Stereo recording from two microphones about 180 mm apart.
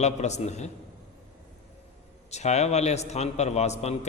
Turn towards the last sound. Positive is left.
turn(degrees=35)  # may be behind; listen again after turning